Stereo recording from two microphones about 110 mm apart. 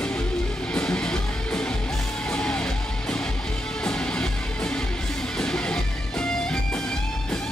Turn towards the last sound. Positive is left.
turn(degrees=5)  # may be behind; listen again after turning